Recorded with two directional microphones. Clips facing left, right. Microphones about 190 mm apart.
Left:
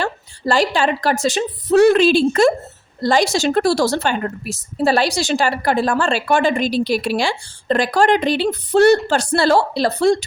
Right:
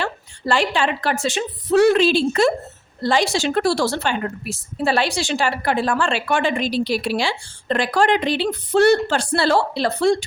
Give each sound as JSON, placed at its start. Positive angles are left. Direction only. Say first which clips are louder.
{"t": 0.0, "sound": "a woman's voice", "louder": "left 3 dB", "side_deg": 40}